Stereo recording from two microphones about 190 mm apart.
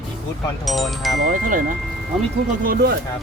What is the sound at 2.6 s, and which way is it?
Speech, 55° right (ahead or behind).